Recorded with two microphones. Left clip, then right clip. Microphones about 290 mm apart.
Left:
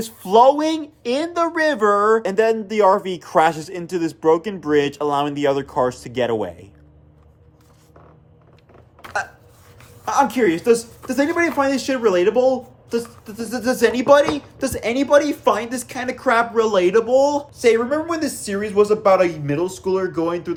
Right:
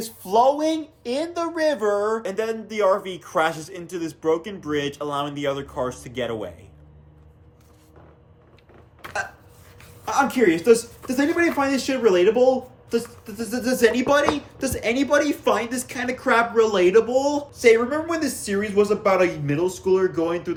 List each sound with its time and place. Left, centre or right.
0.0 s speech: left
9.0 s a sound: centre
10.1 s speech: centre